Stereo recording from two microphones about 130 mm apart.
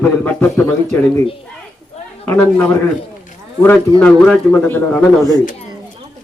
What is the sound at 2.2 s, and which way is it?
Speech, 15° left (ahead or behind).